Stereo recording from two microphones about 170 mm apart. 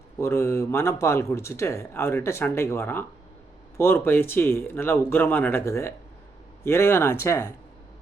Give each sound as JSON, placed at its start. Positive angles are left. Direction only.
{"t": 0.2, "sound": "speech", "side_deg": 15}